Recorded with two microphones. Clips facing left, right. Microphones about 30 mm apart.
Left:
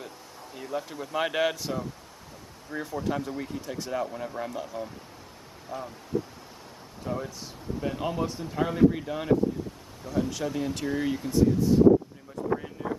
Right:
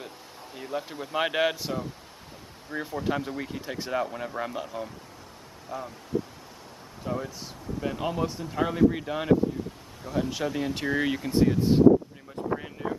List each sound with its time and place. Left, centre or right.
0.6 s speech: centre
5.7 s speech: centre
7.1 s speech: centre; by 11.1 s right
11.4 s speech: right
12.5 s a sound: right